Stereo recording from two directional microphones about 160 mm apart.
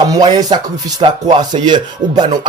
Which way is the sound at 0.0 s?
25° right (ahead or behind).